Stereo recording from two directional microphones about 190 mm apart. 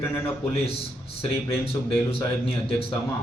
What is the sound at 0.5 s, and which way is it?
Speech, 30° left (ahead or behind).